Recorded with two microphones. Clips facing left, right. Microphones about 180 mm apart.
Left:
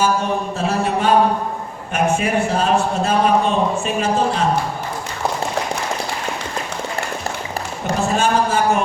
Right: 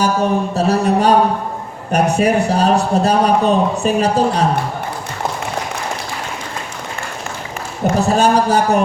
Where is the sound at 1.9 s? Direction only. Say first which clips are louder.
Right 4 dB; 40° right (ahead or behind).